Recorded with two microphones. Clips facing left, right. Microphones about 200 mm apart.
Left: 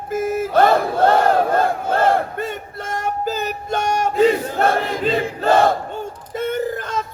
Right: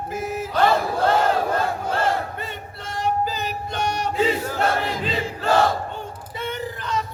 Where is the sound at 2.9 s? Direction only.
45° left (ahead or behind).